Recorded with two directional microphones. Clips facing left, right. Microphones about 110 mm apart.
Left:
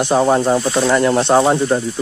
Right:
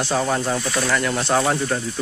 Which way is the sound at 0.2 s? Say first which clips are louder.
Left 8 dB; 30° left (ahead or behind).